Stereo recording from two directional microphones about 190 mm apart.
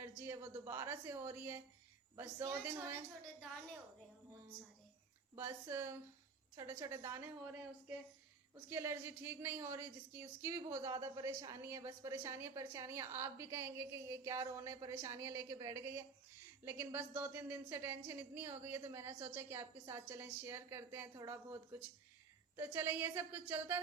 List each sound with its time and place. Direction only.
0.2 s a woman's voice: 15° right (ahead or behind)
5.3 s a woman's voice: 15° right (ahead or behind)